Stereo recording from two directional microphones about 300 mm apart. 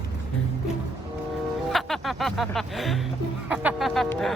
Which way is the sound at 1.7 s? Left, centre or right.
Centre.